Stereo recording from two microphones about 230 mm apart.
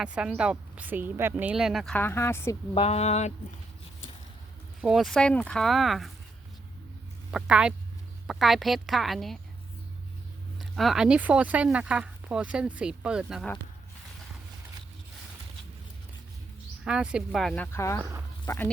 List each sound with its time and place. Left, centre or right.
0.0 s speech: centre
2.7 s speech: left
4.8 s speech: centre
7.3 s speech: centre
10.6 s speech: centre
16.8 s speech: centre